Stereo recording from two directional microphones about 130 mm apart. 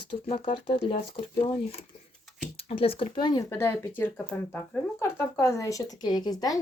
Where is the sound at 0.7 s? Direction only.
50° left (ahead or behind).